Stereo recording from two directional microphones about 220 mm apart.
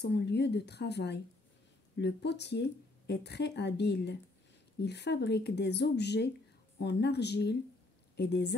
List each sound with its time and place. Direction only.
0.0 s speech: 50° left (ahead or behind)